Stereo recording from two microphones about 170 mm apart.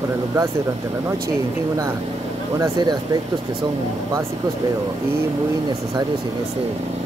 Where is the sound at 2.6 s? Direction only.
25° right (ahead or behind).